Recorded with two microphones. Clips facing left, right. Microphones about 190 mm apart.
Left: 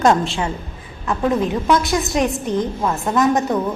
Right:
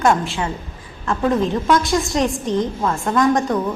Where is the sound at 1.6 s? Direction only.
5° left (ahead or behind).